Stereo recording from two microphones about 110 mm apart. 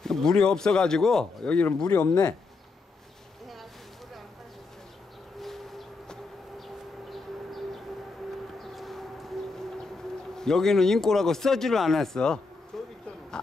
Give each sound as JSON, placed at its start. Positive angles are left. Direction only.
{"t": 0.0, "sound": "speech", "side_deg": 5}
{"t": 1.9, "sound": "speech", "side_deg": 35}
{"t": 5.4, "sound": "civil defense siren", "side_deg": 0}
{"t": 7.1, "sound": "siren", "side_deg": 0}
{"t": 8.5, "sound": "civil defense siren", "side_deg": 0}
{"t": 10.3, "sound": "speech", "side_deg": 5}